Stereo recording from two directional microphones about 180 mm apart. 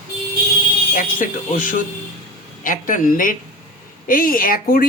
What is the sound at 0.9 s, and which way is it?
Speech, 50° left (ahead or behind).